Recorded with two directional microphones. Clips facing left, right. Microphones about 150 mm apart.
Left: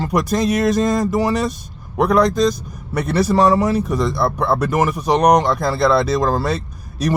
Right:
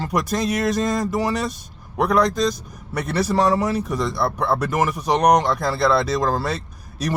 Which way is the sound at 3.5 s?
35° left (ahead or behind).